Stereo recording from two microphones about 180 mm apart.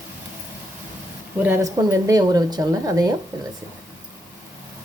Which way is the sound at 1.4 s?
15° right (ahead or behind).